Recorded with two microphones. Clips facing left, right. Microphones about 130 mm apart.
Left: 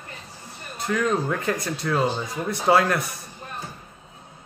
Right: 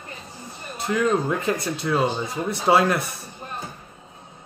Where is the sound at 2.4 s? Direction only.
25° right (ahead or behind).